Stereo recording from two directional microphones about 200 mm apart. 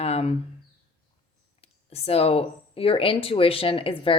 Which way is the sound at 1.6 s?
30° left (ahead or behind).